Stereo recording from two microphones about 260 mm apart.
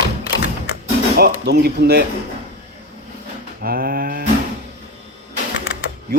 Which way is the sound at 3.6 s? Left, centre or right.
Right.